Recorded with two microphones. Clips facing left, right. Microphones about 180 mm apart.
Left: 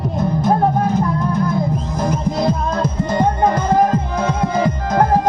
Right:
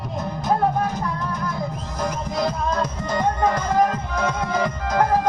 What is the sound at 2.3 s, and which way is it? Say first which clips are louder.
Music: left 4 dB; 30° left (ahead or behind).